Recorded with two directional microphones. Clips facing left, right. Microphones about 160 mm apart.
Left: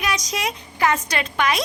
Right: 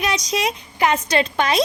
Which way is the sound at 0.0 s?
25° right (ahead or behind).